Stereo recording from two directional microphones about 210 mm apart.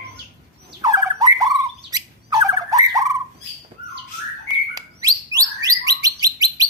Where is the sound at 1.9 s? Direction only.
15° right (ahead or behind).